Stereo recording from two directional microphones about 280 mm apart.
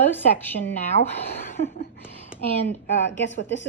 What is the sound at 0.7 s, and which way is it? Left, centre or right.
Speech, left.